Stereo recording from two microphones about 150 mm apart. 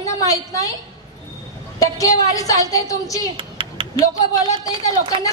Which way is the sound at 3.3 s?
35° right (ahead or behind).